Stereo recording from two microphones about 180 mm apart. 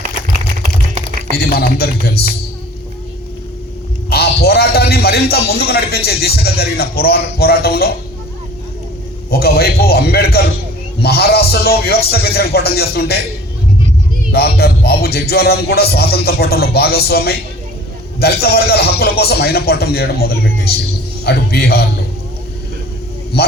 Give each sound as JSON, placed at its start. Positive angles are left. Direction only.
{"t": 1.4, "sound": "music", "side_deg": 60}
{"t": 4.1, "sound": "a man's voice", "side_deg": 60}
{"t": 9.3, "sound": "music", "side_deg": 60}
{"t": 14.3, "sound": "music", "side_deg": 60}
{"t": 23.3, "sound": "music", "side_deg": 65}